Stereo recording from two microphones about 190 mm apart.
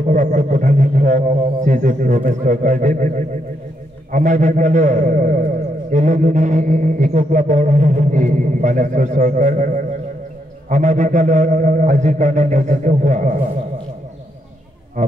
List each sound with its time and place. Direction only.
0.0 s a man's voice: 40° right (ahead or behind)
15.0 s speech: 40° right (ahead or behind)